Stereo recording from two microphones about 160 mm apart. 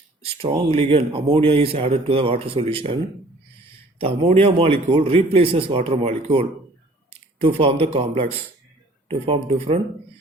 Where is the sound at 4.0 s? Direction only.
35° right (ahead or behind).